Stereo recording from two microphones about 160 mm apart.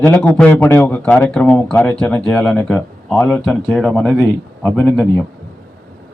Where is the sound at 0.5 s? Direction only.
15° left (ahead or behind).